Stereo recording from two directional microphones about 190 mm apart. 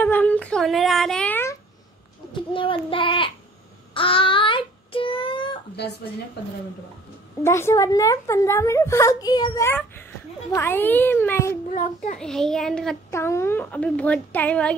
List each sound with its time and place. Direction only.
0.0 s a sound: 10° left (ahead or behind)
2.5 s child singing: 25° left (ahead or behind)
5.8 s speech: 60° left (ahead or behind)
7.4 s a woman's voice: 15° left (ahead or behind)
11.7 s child singing: 40° left (ahead or behind)
12.2 s a child's voice: centre (ahead or behind)
13.1 s a woman's voice: 15° left (ahead or behind)